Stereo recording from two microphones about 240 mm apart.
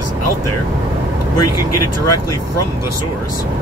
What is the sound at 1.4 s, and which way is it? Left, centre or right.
Speech, left.